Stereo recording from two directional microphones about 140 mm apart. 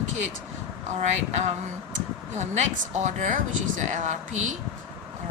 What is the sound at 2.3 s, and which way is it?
Speech, 55° right (ahead or behind).